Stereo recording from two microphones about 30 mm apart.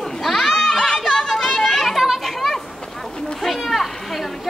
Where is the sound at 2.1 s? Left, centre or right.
Centre.